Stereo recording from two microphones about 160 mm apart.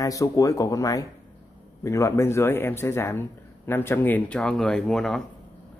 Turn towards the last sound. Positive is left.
turn(degrees=5)  # may be behind; listen again after turning